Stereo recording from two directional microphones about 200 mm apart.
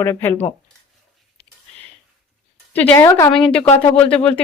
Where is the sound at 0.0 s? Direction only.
10° left (ahead or behind).